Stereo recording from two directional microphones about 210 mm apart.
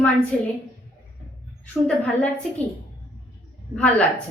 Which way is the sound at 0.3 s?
5° left (ahead or behind).